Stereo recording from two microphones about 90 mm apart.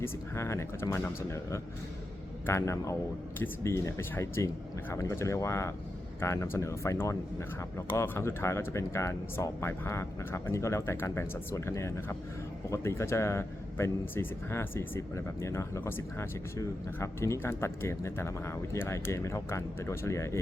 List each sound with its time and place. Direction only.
0.0 s speech: 30° left (ahead or behind)